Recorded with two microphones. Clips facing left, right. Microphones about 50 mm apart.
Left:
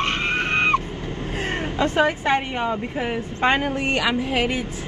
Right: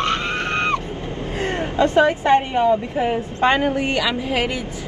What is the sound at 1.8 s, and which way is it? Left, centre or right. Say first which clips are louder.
Speech: right 4 dB; left.